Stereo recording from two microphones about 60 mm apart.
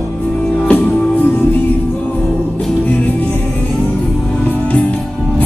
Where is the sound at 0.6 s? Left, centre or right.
Left.